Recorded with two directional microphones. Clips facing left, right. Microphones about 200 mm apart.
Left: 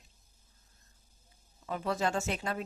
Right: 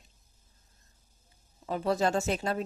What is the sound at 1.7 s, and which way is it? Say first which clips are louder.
Speech: right 4 dB; 35° right (ahead or behind).